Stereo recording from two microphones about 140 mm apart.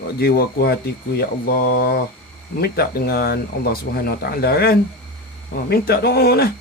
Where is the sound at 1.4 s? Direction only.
90° left.